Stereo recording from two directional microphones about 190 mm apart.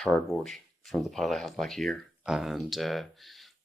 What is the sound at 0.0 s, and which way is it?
Speech, centre (ahead or behind).